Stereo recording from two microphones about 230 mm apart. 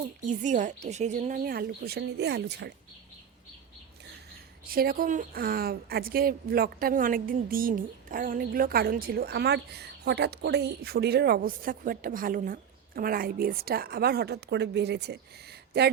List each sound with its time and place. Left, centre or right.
0.3 s a woman's voice: right
4.6 s a woman's voice: right